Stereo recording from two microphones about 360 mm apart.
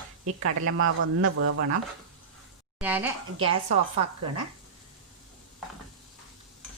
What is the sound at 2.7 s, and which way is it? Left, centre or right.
Speech, centre.